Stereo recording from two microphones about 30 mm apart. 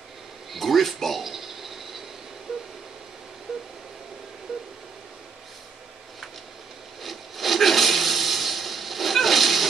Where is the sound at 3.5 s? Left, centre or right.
Centre.